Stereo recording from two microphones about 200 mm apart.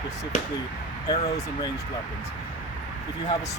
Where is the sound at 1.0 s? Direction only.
20° left (ahead or behind).